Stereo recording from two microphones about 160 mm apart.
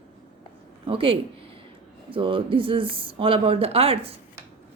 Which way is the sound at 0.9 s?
35° right (ahead or behind).